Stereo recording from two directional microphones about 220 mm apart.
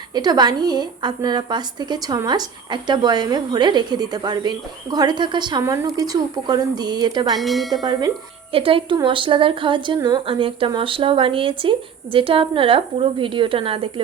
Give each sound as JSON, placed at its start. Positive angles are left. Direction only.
{"t": 0.1, "sound": "a woman's voice", "side_deg": -20}
{"t": 7.3, "sound": "speech", "side_deg": 0}
{"t": 7.9, "sound": "a woman's voice", "side_deg": -20}